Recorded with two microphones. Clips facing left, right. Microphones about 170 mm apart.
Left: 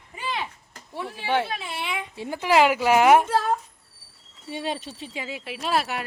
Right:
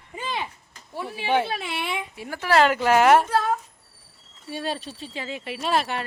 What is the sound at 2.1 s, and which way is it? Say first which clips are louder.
Speech: left 1 dB; 20° left (ahead or behind).